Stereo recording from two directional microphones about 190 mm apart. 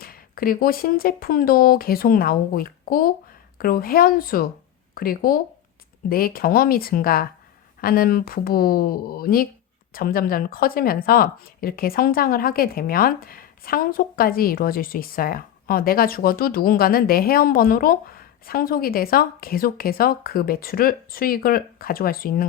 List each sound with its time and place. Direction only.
0.0 s speech: 50° left (ahead or behind)